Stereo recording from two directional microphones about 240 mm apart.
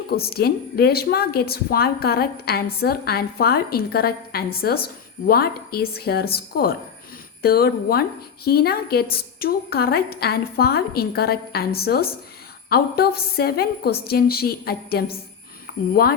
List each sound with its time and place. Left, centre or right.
0.1 s a woman's voice: left